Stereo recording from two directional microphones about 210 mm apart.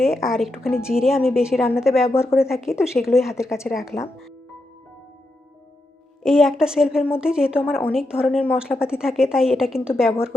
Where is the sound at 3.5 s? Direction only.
15° left (ahead or behind).